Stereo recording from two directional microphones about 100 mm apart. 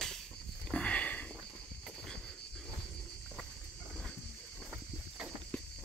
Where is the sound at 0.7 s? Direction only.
10° left (ahead or behind).